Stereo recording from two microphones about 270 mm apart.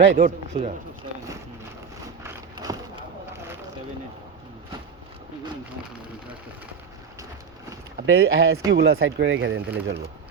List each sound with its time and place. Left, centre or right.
0.0 s speech: right
2.2 s a sound: centre
8.0 s speech: right